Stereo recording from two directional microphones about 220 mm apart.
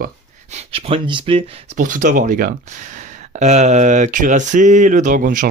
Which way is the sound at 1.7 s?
35° right (ahead or behind).